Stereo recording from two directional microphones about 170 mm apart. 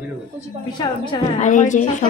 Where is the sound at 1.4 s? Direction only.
45° left (ahead or behind).